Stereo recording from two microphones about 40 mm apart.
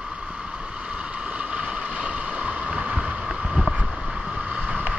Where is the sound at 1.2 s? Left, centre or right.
Right.